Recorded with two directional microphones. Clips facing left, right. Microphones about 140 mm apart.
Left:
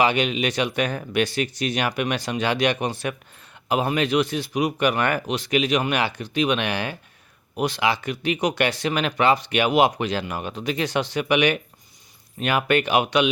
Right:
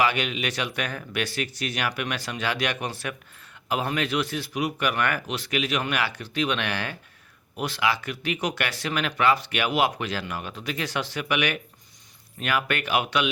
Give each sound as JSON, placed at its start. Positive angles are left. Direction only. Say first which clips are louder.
{"t": 0.0, "sound": "speech", "louder": "left 4 dB", "side_deg": 20}